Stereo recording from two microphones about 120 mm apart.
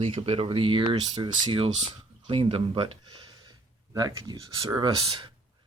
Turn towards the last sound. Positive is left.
turn(degrees=-45)  # may be behind; listen again after turning